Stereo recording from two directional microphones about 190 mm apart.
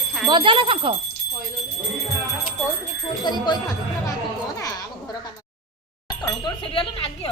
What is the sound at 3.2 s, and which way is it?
Speech, 20° left (ahead or behind).